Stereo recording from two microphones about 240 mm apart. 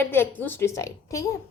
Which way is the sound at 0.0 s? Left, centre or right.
Centre.